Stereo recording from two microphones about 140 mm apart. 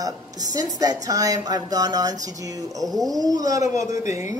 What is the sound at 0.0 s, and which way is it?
Speech, 25° right (ahead or behind).